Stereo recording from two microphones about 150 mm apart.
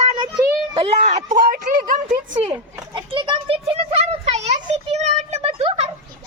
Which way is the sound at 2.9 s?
30° right (ahead or behind).